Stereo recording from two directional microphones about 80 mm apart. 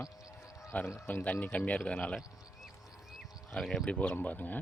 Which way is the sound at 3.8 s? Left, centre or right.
Centre.